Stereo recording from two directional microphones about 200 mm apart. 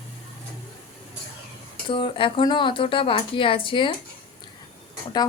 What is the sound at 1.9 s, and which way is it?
A woman's voice, 25° left (ahead or behind).